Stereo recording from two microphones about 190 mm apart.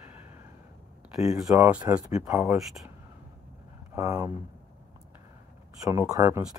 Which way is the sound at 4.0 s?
15° right (ahead or behind).